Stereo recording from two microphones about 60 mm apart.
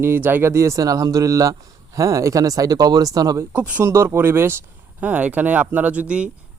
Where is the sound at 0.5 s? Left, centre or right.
Right.